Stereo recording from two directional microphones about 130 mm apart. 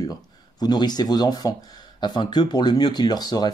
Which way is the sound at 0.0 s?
30° left (ahead or behind).